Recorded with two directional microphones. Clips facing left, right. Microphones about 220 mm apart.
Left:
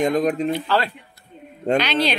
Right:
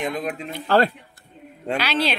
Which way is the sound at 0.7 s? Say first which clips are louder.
Right 4 dB; 45° right (ahead or behind).